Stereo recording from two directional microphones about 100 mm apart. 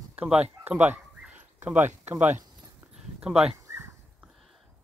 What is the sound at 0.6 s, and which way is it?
Bow-wow, 15° right (ahead or behind).